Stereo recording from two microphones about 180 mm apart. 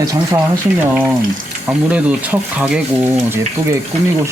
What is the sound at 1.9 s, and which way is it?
Speech, 10° right (ahead or behind).